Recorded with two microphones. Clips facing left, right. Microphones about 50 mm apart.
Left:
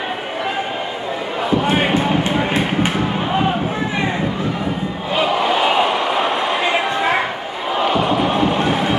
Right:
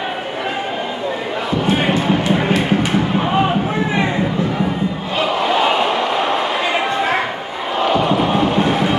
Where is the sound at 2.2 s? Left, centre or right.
Left.